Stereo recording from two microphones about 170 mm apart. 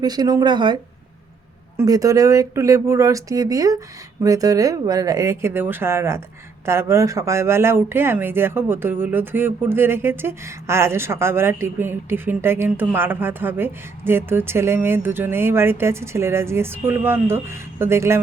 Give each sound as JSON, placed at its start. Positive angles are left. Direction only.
{"t": 0.0, "sound": "speech", "side_deg": -25}